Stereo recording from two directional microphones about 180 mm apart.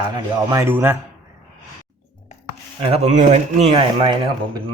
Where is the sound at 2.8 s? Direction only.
35° right (ahead or behind).